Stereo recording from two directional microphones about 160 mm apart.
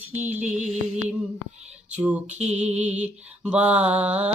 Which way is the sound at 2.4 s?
45° right (ahead or behind).